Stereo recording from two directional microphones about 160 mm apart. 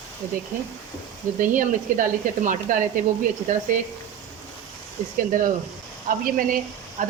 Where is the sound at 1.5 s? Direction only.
55° right (ahead or behind).